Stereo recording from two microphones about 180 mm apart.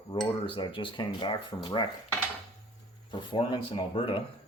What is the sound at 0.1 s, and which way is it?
Cutlery, 30° left (ahead or behind).